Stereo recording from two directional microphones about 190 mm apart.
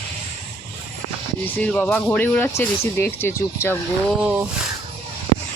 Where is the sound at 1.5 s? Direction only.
10° left (ahead or behind).